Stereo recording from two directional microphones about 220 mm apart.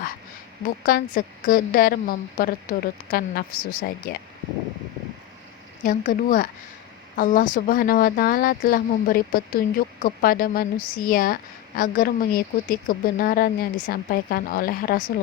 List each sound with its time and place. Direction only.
0.9 s speech: 40° left (ahead or behind)
5.8 s speech: 35° left (ahead or behind)